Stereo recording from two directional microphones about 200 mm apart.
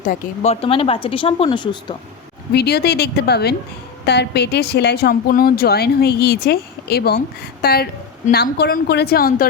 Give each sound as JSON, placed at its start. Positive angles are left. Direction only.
{"t": 0.0, "sound": "speech", "side_deg": 35}
{"t": 2.5, "sound": "a woman's voice", "side_deg": 55}